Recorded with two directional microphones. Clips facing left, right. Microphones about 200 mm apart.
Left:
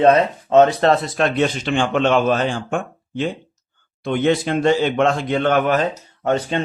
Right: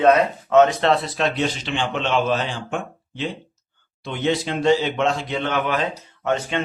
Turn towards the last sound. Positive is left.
turn(degrees=35)  # may be behind; listen again after turning